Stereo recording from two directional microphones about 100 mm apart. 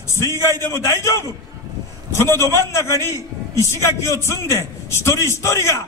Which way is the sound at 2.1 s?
25° left (ahead or behind).